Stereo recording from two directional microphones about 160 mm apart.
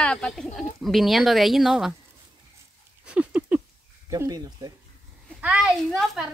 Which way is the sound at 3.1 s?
10° right (ahead or behind).